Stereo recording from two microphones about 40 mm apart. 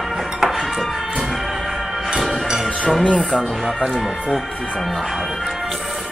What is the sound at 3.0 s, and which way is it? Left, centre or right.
Speech, left.